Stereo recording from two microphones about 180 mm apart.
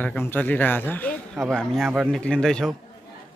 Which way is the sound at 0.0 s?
10° left (ahead or behind).